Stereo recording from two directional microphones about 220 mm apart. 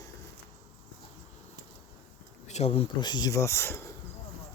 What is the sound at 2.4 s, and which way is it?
Speech, 30° left (ahead or behind).